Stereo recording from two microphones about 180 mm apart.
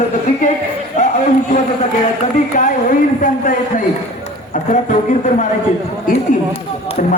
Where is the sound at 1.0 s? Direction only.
45° left (ahead or behind).